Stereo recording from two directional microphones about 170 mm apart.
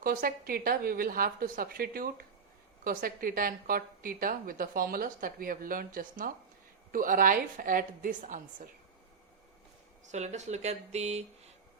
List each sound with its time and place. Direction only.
0.0 s a woman's voice: 60° right (ahead or behind)
10.1 s speech: 45° right (ahead or behind)